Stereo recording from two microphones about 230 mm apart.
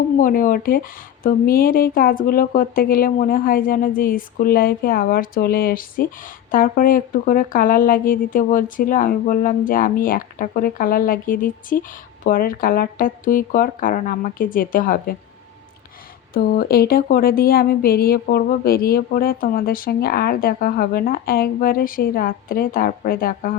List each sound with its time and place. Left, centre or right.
0.2 s speech: left
16.3 s speech: left